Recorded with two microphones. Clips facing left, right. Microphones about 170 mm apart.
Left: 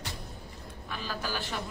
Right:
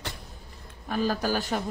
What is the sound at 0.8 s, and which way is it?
Speech, 45° right (ahead or behind).